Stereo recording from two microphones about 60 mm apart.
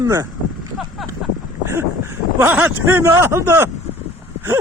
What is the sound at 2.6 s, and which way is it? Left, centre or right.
Speech, right.